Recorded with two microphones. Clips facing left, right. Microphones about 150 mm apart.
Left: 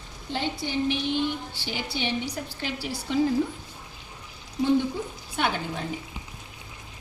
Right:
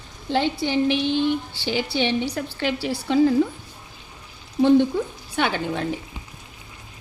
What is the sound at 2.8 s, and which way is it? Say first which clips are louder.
Speech: right 6 dB; 90° right.